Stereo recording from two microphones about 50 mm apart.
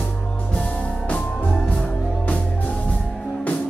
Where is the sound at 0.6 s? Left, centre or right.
Left.